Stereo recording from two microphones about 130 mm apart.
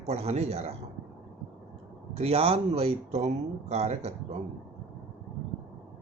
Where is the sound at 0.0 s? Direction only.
55° right (ahead or behind).